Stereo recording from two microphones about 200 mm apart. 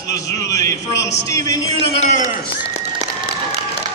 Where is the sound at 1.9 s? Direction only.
35° left (ahead or behind).